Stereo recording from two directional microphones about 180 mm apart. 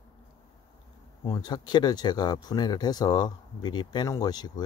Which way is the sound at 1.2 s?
25° left (ahead or behind).